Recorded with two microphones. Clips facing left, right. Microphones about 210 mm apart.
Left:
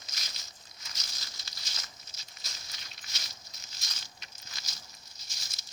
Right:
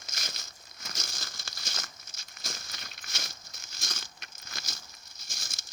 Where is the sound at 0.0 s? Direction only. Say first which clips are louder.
Right 5 dB; 50° right (ahead or behind).